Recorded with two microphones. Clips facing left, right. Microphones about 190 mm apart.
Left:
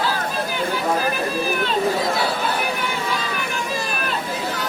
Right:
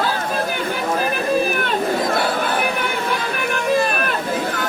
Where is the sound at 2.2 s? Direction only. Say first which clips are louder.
Right 2 dB; 55° right (ahead or behind).